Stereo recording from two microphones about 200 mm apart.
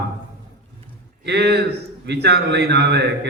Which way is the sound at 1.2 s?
55° right (ahead or behind).